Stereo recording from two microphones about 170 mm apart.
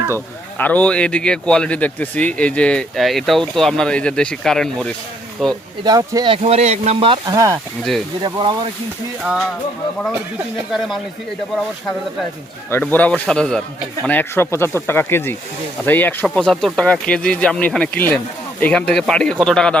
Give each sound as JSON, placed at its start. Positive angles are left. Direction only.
{"t": 0.6, "sound": "speech", "side_deg": 10}
{"t": 5.8, "sound": "speech", "side_deg": -25}
{"t": 9.2, "sound": "speech", "side_deg": 0}
{"t": 10.7, "sound": "speech", "side_deg": 0}
{"t": 12.7, "sound": "speech", "side_deg": 10}